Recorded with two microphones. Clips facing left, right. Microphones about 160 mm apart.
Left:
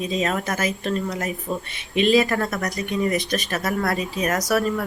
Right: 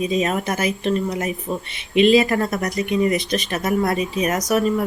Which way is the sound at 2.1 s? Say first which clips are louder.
Right 3 dB; 20° right (ahead or behind).